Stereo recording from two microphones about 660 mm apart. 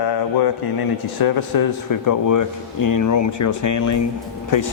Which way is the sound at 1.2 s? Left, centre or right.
Left.